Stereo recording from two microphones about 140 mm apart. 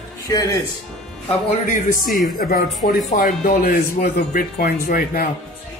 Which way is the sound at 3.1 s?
80° left.